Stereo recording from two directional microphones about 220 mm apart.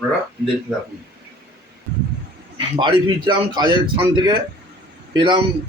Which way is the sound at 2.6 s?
20° right (ahead or behind).